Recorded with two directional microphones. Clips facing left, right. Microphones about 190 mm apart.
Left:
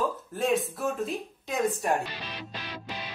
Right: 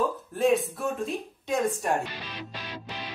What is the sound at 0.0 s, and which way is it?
Speech, centre (ahead or behind).